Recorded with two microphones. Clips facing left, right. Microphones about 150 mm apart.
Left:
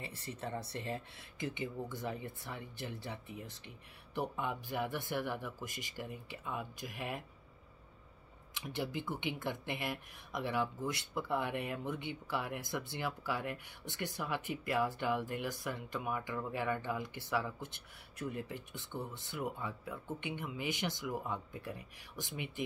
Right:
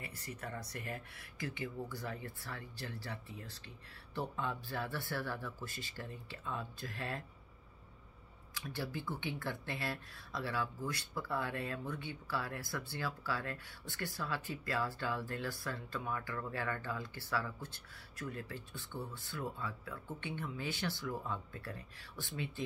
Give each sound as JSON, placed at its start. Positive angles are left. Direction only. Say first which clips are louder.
{"t": 0.0, "sound": "speech", "louder": "left 3 dB", "side_deg": 25}
{"t": 8.5, "sound": "speech", "louder": "left 3 dB", "side_deg": 20}